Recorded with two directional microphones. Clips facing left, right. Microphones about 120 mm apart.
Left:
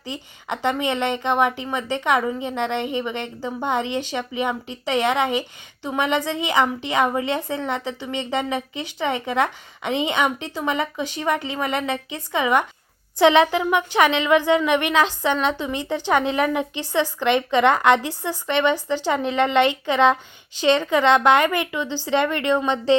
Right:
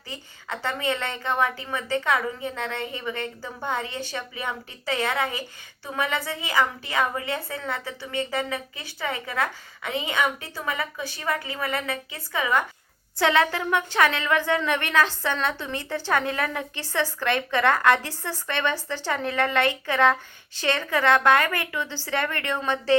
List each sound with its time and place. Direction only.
0.1 s a woman's voice: 20° left (ahead or behind)